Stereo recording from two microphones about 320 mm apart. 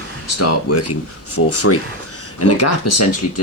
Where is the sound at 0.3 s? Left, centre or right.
Left.